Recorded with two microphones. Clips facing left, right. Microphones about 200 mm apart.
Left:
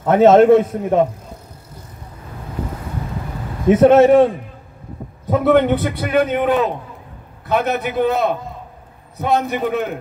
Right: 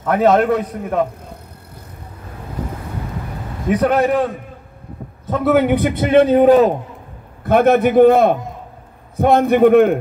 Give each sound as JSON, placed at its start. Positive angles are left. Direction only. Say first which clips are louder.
{"t": 0.0, "sound": "a man's voice", "louder": "left 4 dB", "side_deg": 25}
{"t": 3.6, "sound": "a man's voice", "louder": "left 6 dB", "side_deg": 25}
{"t": 5.4, "sound": "a man's voice", "louder": "right 1 dB", "side_deg": -5}
{"t": 7.4, "sound": "a man's voice", "louder": "right 7 dB", "side_deg": -50}